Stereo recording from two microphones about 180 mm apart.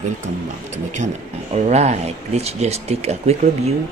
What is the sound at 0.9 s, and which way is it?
Speech, 40° right (ahead or behind).